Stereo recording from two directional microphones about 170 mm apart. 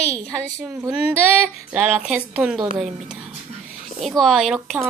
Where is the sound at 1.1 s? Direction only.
10° right (ahead or behind).